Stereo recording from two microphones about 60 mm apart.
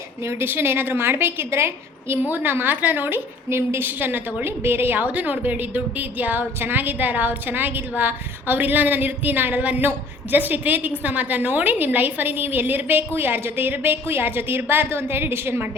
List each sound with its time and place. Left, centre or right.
0.3 s a woman's voice: right
2.2 s a woman's voice: right
5.0 s a woman's voice: right